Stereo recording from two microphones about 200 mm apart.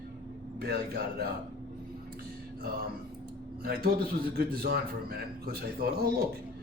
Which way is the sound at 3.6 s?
50° right (ahead or behind).